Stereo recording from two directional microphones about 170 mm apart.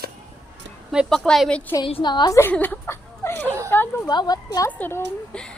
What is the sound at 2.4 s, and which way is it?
Speech, 10° left (ahead or behind).